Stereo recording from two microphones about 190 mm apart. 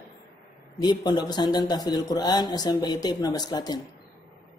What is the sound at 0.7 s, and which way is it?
Speech, 20° left (ahead or behind).